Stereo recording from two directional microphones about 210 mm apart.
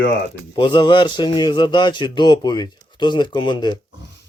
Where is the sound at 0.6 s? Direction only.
20° left (ahead or behind).